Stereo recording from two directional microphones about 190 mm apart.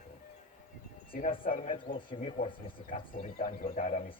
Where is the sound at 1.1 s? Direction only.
45° left (ahead or behind).